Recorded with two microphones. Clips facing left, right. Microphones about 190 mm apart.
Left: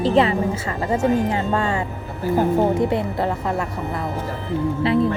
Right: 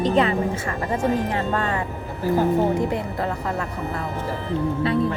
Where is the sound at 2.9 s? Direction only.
30° left (ahead or behind).